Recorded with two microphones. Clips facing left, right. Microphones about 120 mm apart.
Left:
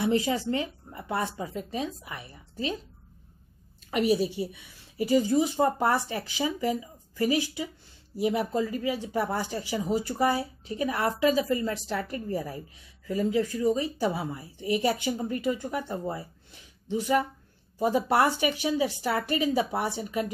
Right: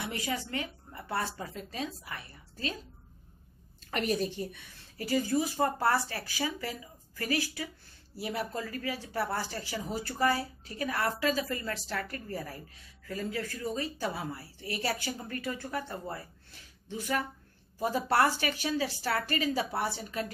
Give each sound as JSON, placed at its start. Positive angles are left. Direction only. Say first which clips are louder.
{"t": 0.0, "sound": "speech", "louder": "left 10 dB", "side_deg": 25}
{"t": 3.9, "sound": "speech", "louder": "left 6 dB", "side_deg": 10}